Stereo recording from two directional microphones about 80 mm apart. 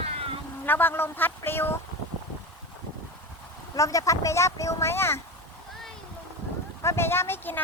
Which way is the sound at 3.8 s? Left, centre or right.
Left.